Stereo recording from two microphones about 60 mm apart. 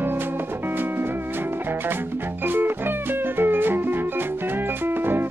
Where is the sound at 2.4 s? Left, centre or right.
Right.